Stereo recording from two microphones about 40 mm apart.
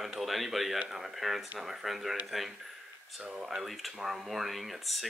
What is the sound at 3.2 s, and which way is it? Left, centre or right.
Speech, centre.